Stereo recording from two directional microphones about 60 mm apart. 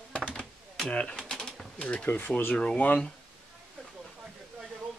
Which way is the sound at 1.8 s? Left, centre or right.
Left.